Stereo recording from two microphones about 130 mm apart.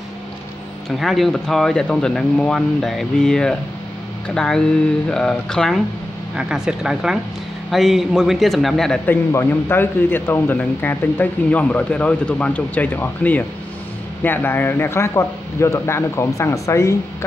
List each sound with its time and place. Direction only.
0.8 s speech: centre (ahead or behind)
9.0 s speech: 15° left (ahead or behind)